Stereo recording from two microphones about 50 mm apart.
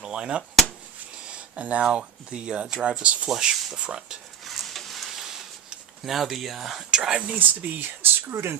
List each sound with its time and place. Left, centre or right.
0.0 s a sound: centre
1.3 s speech: right
3.2 s speech: centre
4.4 s a sound: centre
6.1 s speech: centre
7.3 s speech: right